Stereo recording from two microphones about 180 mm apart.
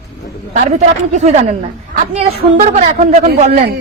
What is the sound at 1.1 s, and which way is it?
A woman's voice, 40° right (ahead or behind).